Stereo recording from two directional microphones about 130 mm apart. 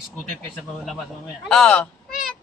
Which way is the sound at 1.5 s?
5° left (ahead or behind).